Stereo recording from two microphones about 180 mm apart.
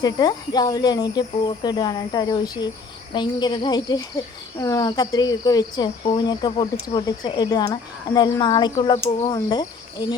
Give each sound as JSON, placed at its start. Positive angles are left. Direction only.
{"t": 0.0, "sound": "speech", "side_deg": 20}